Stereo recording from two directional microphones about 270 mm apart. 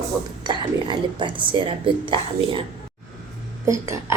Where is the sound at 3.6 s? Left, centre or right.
Centre.